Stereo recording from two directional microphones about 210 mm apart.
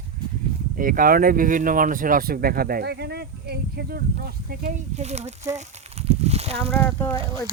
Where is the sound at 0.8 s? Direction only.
40° right (ahead or behind).